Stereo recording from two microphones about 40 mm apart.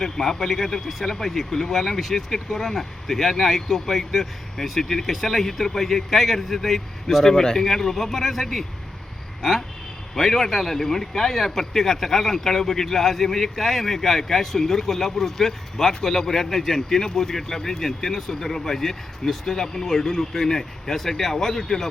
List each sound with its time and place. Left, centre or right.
0.0 s a man's voice: centre